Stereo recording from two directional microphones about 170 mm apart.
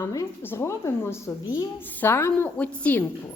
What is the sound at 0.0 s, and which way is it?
A woman's voice, 15° left (ahead or behind).